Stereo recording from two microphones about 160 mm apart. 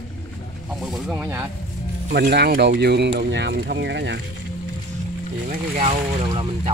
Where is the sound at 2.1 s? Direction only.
90° right.